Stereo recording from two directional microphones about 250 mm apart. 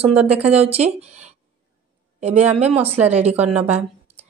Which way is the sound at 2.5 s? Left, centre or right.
Right.